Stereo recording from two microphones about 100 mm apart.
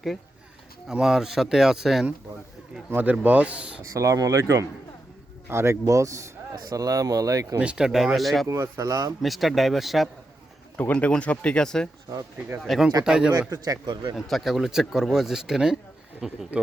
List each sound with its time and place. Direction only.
0.9 s speech: 5° right (ahead or behind)
2.9 s speech: 15° right (ahead or behind)
3.9 s speech: 35° right (ahead or behind)
7.6 s speech: 10° right (ahead or behind)
8.4 s speech: 25° right (ahead or behind)
8.9 s speech: 35° right (ahead or behind)
9.2 s speech: centre (ahead or behind)
10.8 s speech: 15° left (ahead or behind)
12.5 s speech: 5° right (ahead or behind)
13.8 s speech: 50° right (ahead or behind)
14.2 s speech: centre (ahead or behind)